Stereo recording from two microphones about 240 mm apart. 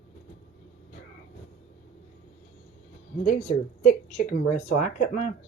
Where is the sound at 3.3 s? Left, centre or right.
Left.